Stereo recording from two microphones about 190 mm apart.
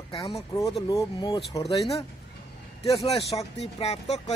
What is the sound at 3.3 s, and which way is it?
Speech, centre (ahead or behind).